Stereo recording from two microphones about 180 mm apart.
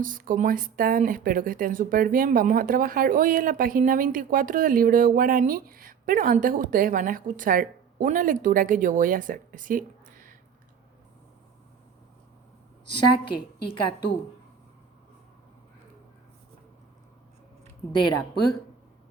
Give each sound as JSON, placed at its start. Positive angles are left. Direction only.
{"t": 0.0, "sound": "speech", "side_deg": -50}
{"t": 12.8, "sound": "a woman's voice", "side_deg": 25}